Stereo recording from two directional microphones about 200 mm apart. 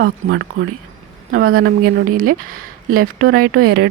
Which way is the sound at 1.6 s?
90° right.